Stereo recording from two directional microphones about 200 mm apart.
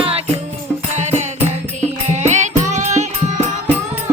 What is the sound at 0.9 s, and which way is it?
Music, 35° right (ahead or behind).